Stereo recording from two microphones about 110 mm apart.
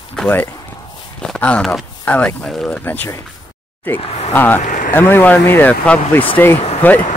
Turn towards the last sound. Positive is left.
turn(degrees=15)  # may be behind; listen again after turning